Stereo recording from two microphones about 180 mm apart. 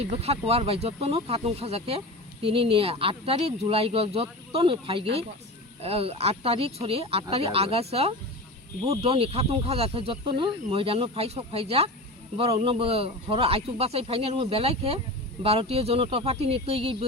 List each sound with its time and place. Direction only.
0.0 s speech: 35° right (ahead or behind)